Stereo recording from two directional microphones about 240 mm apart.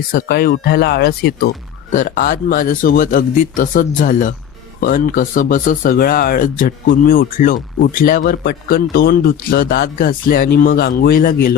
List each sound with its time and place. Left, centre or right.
0.1 s speech: left